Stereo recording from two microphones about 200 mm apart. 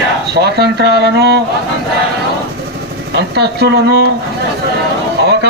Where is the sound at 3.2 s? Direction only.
55° right (ahead or behind).